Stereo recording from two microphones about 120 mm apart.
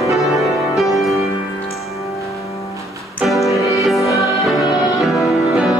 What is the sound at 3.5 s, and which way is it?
Music, centre (ahead or behind).